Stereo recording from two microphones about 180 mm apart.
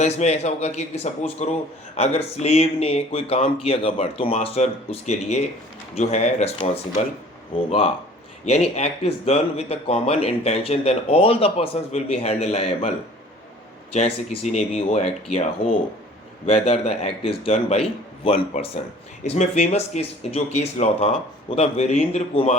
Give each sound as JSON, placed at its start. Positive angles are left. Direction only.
{"t": 0.0, "sound": "speech", "side_deg": 40}
{"t": 8.7, "sound": "speech", "side_deg": 35}
{"t": 13.9, "sound": "speech", "side_deg": 40}